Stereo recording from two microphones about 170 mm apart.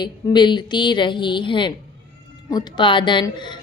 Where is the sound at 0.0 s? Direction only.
25° left (ahead or behind).